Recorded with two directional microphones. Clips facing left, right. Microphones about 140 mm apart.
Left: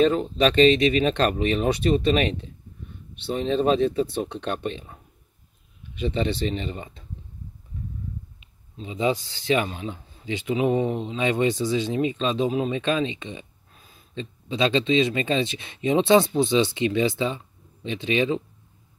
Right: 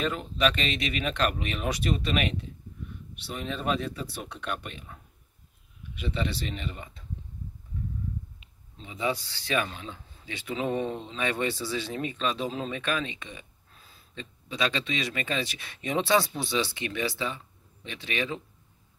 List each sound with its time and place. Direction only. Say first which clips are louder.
0.0 s speech: left 8 dB; 30° left (ahead or behind)
8.8 s speech: left 6 dB; 20° left (ahead or behind)